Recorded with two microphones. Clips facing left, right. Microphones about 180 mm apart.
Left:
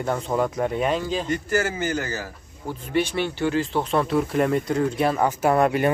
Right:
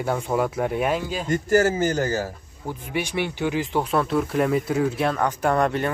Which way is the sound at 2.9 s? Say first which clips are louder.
Left 3 dB; 15° right (ahead or behind).